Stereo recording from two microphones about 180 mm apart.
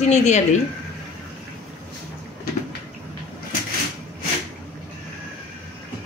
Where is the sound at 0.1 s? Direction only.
40° left (ahead or behind).